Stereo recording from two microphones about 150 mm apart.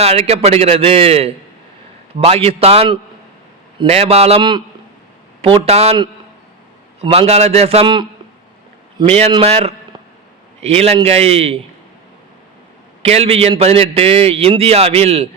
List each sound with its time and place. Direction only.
0.0 s a man's voice: 45° right (ahead or behind)
7.0 s a man's voice: 40° right (ahead or behind)
9.3 s a man's voice: 40° right (ahead or behind)
13.0 s a man's voice: 40° right (ahead or behind)